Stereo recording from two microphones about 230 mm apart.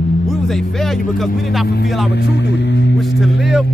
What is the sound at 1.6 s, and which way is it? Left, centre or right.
Speech, left.